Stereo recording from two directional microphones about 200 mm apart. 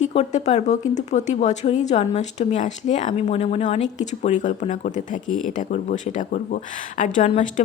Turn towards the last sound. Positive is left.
turn(degrees=40)  # may be behind; listen again after turning